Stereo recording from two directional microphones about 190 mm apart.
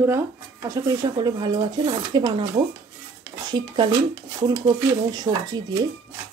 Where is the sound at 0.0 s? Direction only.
15° right (ahead or behind).